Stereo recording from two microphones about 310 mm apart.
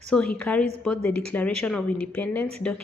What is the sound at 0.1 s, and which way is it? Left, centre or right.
A woman's voice, centre.